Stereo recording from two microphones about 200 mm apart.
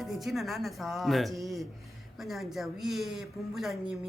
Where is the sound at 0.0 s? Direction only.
Centre (ahead or behind).